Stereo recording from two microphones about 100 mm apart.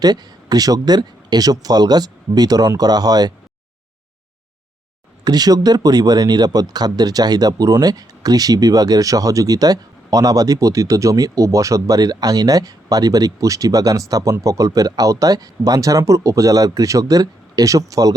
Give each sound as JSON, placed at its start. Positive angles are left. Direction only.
{"t": 0.0, "sound": "speech", "side_deg": -40}
{"t": 5.2, "sound": "speech", "side_deg": -40}